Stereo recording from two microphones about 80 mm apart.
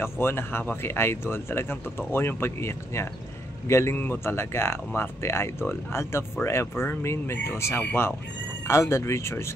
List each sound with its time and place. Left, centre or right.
0.0 s speech: left
4.0 s speech: left
8.6 s speech: left